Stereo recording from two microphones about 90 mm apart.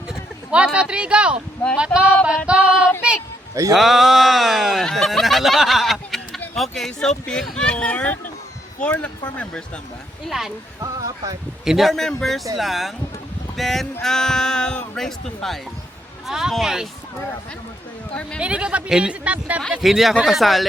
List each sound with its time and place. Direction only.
0.1 s a man's voice: 10° right (ahead or behind)
2.5 s female singing: 10° right (ahead or behind)
3.5 s a man's voice: 40° right (ahead or behind)
3.8 s speech: centre (ahead or behind)
10.2 s speech: centre (ahead or behind)
10.8 s speech: 40° right (ahead or behind)
11.6 s speech: 5° right (ahead or behind)
18.1 s speech: 10° left (ahead or behind)
18.3 s a man's voice: 10° right (ahead or behind)
19.8 s speech: centre (ahead or behind)